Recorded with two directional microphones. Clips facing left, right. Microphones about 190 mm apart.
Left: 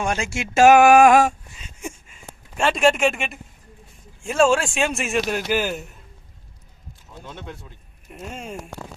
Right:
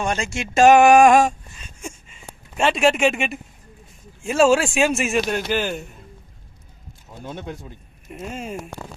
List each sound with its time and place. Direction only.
0.0 s speech: 10° left (ahead or behind)
1.5 s a sound: 15° left (ahead or behind)
2.6 s speech: centre (ahead or behind)
7.3 s speech: 40° right (ahead or behind)
8.0 s speech: centre (ahead or behind)